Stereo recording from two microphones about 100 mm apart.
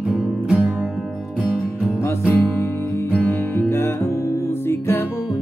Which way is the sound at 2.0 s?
25° left (ahead or behind).